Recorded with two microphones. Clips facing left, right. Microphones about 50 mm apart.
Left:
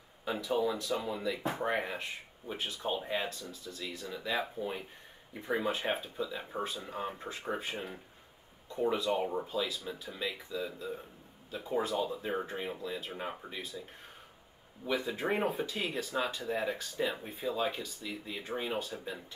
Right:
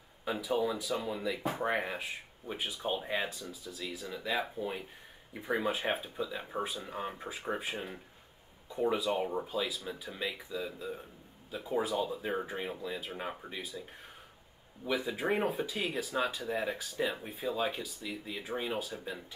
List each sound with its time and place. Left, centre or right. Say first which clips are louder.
0.2 s speech: even; centre
14.9 s speech: even; centre